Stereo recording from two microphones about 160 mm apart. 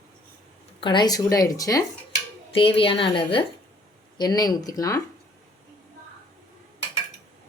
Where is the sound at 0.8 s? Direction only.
30° left (ahead or behind).